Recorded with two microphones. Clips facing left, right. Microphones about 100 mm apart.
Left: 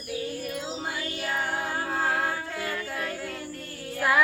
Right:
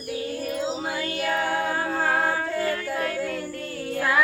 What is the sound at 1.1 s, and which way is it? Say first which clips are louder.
Music: right 6 dB; 60° right (ahead or behind).